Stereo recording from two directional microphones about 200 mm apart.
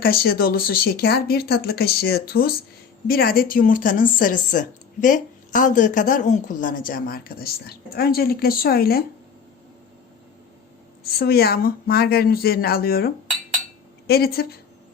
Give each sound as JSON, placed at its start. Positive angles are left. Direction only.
{"t": 0.0, "sound": "speech", "side_deg": 50}
{"t": 11.0, "sound": "speech", "side_deg": 50}
{"t": 14.1, "sound": "speech", "side_deg": 50}